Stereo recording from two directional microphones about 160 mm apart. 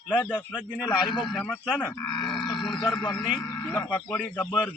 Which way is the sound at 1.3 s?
10° left (ahead or behind).